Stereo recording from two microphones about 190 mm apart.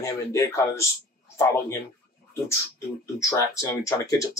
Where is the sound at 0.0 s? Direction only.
15° left (ahead or behind).